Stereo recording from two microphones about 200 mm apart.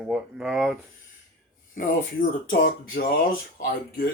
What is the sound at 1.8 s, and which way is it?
Speech, 45° left (ahead or behind).